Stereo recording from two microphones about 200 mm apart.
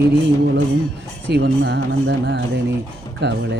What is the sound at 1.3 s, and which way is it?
Music, 55° right (ahead or behind).